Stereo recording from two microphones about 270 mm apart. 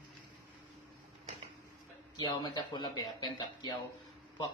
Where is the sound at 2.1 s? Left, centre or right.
Centre.